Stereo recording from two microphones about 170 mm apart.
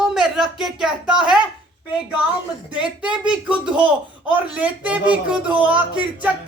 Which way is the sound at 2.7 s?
5° right (ahead or behind).